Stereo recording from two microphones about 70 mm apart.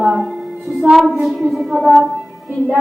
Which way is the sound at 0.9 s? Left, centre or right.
Right.